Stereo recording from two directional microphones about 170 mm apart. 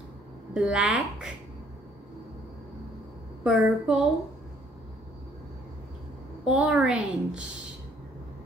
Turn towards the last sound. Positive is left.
turn(degrees=-5)  # may be behind; listen again after turning